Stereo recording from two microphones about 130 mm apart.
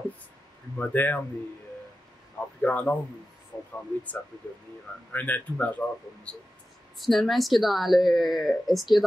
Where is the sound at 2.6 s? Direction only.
10° left (ahead or behind).